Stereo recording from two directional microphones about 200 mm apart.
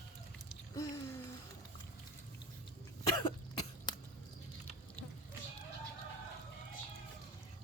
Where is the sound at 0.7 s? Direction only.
15° left (ahead or behind).